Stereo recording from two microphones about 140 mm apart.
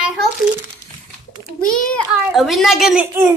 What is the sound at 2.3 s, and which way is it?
Speech, centre (ahead or behind).